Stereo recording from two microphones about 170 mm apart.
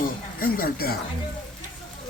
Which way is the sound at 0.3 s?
60° left (ahead or behind).